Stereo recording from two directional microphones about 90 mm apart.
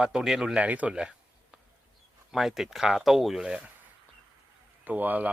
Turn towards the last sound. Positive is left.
turn(degrees=-20)  # may be behind; listen again after turning